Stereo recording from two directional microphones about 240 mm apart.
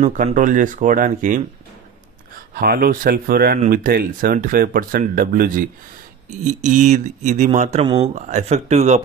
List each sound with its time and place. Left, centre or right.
0.0 s speech: right
2.5 s speech: right